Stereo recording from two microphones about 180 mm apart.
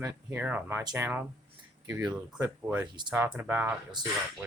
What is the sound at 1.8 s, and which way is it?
Speech, 10° right (ahead or behind).